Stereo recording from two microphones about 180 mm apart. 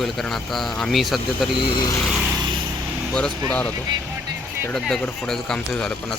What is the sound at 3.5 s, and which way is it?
Speech, 5° left (ahead or behind).